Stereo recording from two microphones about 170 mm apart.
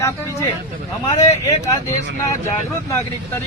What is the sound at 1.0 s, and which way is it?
Speech, 20° left (ahead or behind).